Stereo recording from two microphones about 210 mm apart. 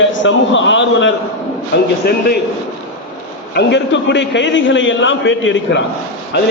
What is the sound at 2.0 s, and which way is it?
Speech, 50° left (ahead or behind).